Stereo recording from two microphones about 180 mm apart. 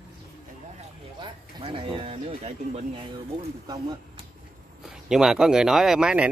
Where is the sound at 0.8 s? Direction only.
30° right (ahead or behind).